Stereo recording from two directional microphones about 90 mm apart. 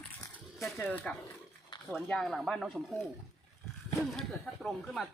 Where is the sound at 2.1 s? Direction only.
Centre (ahead or behind).